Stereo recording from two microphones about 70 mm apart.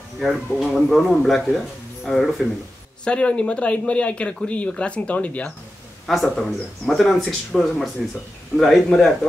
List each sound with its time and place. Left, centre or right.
0.2 s speech: centre
3.1 s speech: centre
6.0 s speech: centre